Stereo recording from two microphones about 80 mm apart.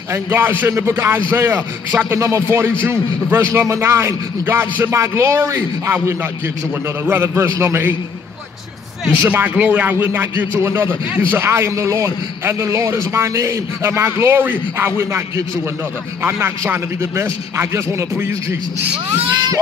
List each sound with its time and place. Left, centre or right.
0.1 s a man's voice: right
2.1 s a man's voice: right
7.1 s a man's voice: right
9.2 s a man's voice: right